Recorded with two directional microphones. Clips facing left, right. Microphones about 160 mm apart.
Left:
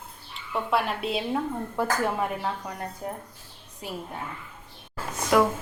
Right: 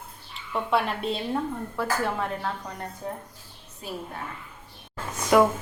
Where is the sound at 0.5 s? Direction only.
Centre (ahead or behind).